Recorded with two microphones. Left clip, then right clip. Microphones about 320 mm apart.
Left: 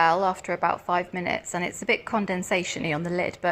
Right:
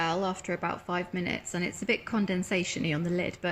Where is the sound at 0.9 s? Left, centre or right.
Centre.